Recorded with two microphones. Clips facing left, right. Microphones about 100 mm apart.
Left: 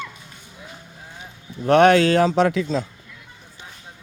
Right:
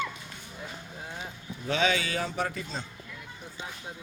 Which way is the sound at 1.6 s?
65° left (ahead or behind).